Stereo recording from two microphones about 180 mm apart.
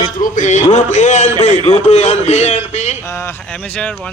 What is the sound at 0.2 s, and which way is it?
A man's voice, 45° left (ahead or behind).